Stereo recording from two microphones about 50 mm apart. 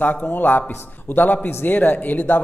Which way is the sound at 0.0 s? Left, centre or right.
Left.